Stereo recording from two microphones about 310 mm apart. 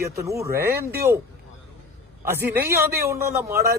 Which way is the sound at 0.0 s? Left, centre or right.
Centre.